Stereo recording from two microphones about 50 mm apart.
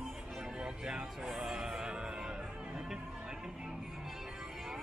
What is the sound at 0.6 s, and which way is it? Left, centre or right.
Music, centre.